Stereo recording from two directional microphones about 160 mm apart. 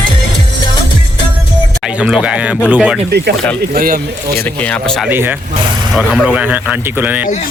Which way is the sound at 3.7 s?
65° right (ahead or behind).